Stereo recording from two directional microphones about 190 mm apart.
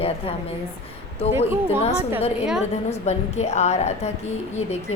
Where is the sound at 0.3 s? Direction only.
30° left (ahead or behind).